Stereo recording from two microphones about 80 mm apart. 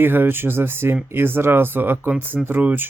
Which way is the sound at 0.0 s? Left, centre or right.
Right.